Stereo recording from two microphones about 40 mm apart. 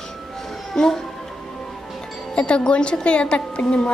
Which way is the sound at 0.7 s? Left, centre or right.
Centre.